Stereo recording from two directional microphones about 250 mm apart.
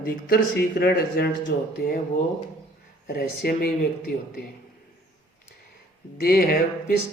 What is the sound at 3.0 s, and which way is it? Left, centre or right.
Speech, left.